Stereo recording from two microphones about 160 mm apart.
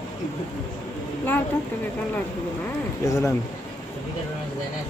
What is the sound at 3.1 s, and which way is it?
Speech, 20° left (ahead or behind).